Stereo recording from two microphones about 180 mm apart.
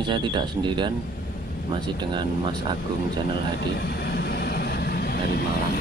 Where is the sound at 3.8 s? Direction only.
65° left (ahead or behind).